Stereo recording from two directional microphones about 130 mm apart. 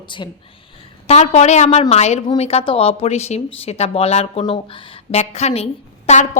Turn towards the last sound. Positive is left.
turn(degrees=60)  # may be behind; listen again after turning